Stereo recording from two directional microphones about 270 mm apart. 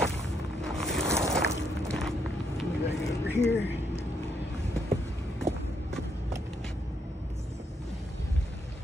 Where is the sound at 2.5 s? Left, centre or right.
Centre.